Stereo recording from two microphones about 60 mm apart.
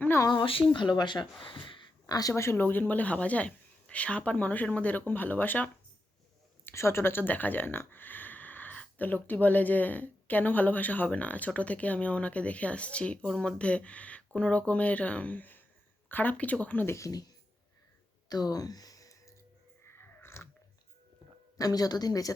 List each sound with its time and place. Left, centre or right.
0.6 s speech: left
2.0 s speech: left
2.3 s speech: left
2.6 s a woman's voice: left
6.7 s a woman's voice: left
13.2 s speech: centre
13.6 s a woman's voice: centre
16.8 s speech: left
17.1 s speech: left
18.3 s a sound: left
19.8 s a sound: left
21.6 s speech: left